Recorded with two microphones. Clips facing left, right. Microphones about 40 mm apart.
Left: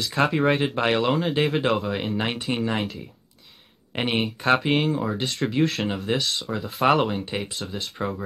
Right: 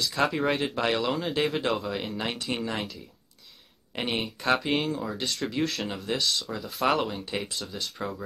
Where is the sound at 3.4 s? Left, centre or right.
Left.